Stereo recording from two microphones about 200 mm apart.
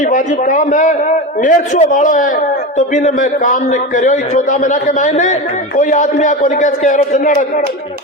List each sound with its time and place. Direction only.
0.0 s a man's voice: 40° left (ahead or behind)